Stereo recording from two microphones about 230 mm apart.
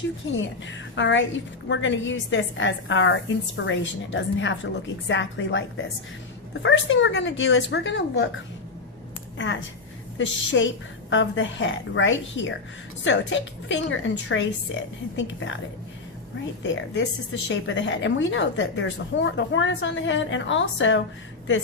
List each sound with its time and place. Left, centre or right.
0.3 s a woman's voice: left
10.2 s a woman's voice: left
16.6 s a woman's voice: left